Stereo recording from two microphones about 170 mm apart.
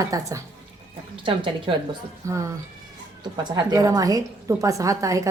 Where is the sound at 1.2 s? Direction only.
30° right (ahead or behind).